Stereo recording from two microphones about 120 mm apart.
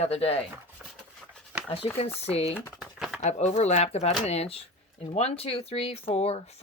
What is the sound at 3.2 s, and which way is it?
Speech, 70° left (ahead or behind).